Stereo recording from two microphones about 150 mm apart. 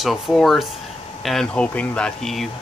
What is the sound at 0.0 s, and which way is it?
Speech, centre (ahead or behind).